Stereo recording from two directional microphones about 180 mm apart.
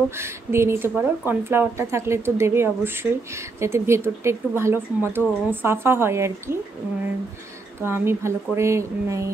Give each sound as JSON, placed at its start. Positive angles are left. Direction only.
{"t": 0.2, "sound": "a woman's voice", "side_deg": -15}
{"t": 7.8, "sound": "a woman's voice", "side_deg": -15}